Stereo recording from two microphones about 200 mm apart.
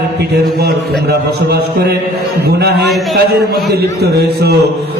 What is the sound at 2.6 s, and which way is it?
A man's voice, 55° right (ahead or behind).